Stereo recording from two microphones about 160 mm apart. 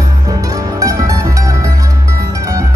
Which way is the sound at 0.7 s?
20° right (ahead or behind).